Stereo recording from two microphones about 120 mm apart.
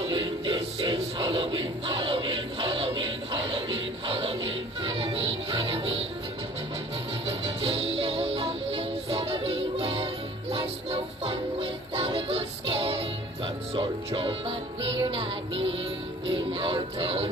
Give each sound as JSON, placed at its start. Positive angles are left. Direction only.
{"t": 0.0, "sound": "music", "side_deg": -45}
{"t": 7.2, "sound": "music", "side_deg": -55}
{"t": 16.3, "sound": "music", "side_deg": -50}